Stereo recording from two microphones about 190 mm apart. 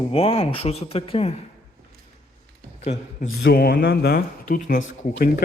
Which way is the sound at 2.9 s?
40° left (ahead or behind).